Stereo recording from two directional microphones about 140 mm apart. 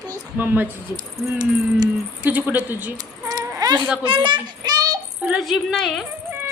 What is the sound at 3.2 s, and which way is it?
Keys jangling, 25° right (ahead or behind).